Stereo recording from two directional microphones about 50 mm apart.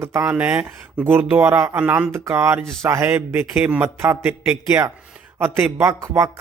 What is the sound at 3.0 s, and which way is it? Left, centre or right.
Speech, right.